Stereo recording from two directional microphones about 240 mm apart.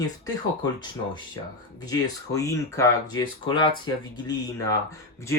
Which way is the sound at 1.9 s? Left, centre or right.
Centre.